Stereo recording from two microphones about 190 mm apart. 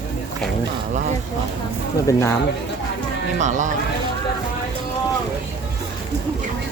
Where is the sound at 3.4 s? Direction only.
40° right (ahead or behind).